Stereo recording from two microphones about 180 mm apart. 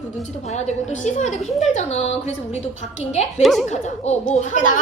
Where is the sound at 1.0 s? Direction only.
40° left (ahead or behind).